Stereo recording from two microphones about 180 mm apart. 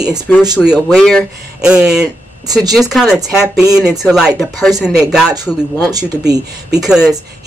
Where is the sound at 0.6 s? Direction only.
5° right (ahead or behind).